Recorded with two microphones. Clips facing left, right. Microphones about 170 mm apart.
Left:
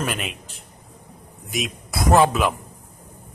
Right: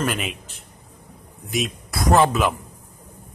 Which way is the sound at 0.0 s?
Centre (ahead or behind).